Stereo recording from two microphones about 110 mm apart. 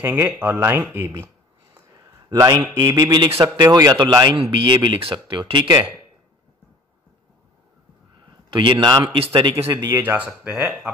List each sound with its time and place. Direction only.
0.0 s speech: 15° right (ahead or behind)
2.2 s a man's voice: 35° right (ahead or behind)
4.4 s speech: 50° right (ahead or behind)
8.5 s speech: 45° right (ahead or behind)
9.8 s speech: 30° right (ahead or behind)
10.0 s speech: 15° right (ahead or behind)